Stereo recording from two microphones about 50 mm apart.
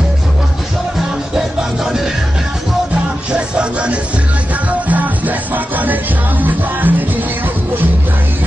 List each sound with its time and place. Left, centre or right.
2.9 s music: centre; by 7.2 s right